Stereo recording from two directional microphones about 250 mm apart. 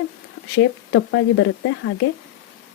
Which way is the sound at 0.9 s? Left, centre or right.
Left.